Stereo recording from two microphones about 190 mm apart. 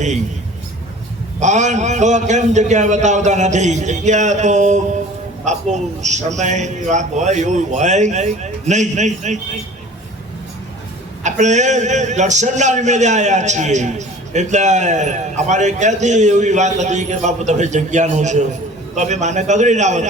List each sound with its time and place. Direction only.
1.4 s a man's voice: 40° right (ahead or behind)
11.2 s a man's voice: 40° right (ahead or behind)